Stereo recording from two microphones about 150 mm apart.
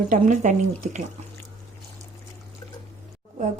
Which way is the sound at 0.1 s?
55° right (ahead or behind).